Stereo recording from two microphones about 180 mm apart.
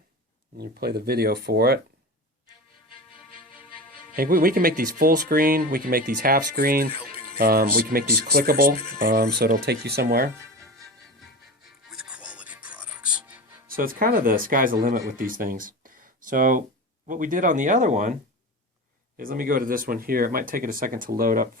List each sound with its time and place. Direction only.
0.5 s speech: 60° right (ahead or behind)
4.1 s speech: 55° right (ahead or behind)
10.4 s music: 15° right (ahead or behind)
11.9 s music: 5° right (ahead or behind)
13.7 s speech: 50° right (ahead or behind)